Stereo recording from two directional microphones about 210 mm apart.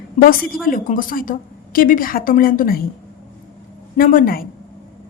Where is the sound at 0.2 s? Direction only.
30° left (ahead or behind).